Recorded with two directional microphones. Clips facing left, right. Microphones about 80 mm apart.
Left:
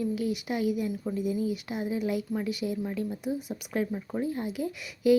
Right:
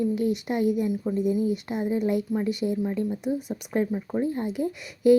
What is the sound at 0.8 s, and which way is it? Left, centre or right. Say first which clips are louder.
Speech: right 5 dB; right.